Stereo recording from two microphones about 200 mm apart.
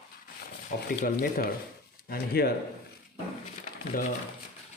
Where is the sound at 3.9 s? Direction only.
45° left (ahead or behind).